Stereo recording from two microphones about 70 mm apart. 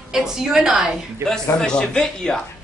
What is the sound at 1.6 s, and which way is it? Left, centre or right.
Speech, centre.